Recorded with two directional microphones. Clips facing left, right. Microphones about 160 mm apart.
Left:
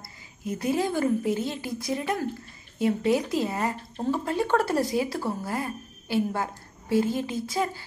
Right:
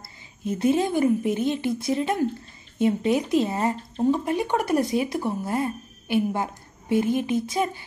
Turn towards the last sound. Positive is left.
turn(degrees=-20)  # may be behind; listen again after turning